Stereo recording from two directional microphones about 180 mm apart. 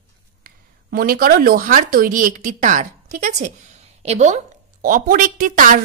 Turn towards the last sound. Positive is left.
turn(degrees=-50)  # may be behind; listen again after turning